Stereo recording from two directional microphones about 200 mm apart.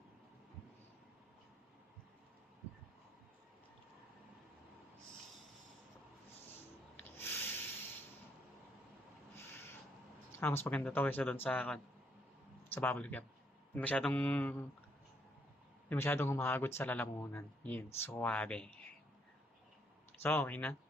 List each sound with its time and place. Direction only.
6.9 s snort: 10° left (ahead or behind)
9.3 s a sound: 10° left (ahead or behind)
10.4 s speech: 10° left (ahead or behind)
15.9 s speech: 10° left (ahead or behind)
20.2 s speech: 10° left (ahead or behind)